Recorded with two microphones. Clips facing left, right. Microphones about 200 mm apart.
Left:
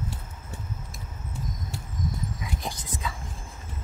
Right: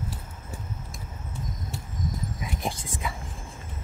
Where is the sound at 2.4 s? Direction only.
25° right (ahead or behind).